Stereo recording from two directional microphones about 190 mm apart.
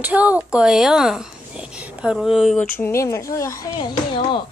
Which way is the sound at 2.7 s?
15° left (ahead or behind).